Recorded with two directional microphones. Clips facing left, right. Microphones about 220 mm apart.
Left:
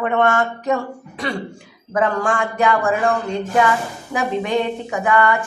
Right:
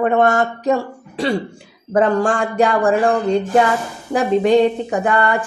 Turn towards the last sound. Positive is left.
turn(degrees=-35)  # may be behind; listen again after turning